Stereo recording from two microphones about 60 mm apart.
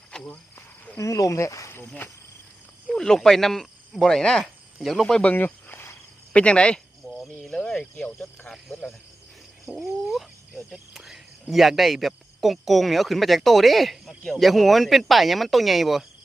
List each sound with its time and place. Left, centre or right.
0.1 s cricket: centre
0.9 s speech: left
2.9 s speech: centre
5.2 s speech: left
6.3 s speech: centre
9.7 s speech: centre